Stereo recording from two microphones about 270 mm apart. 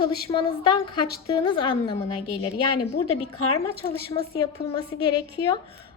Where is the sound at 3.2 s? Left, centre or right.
Left.